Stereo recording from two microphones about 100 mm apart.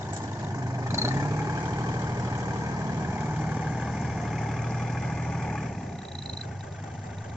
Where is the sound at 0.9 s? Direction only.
25° right (ahead or behind).